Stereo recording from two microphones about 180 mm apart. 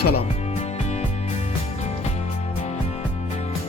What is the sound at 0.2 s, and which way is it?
Music, 35° left (ahead or behind).